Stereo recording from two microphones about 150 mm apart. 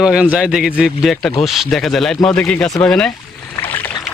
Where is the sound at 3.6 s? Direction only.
15° left (ahead or behind).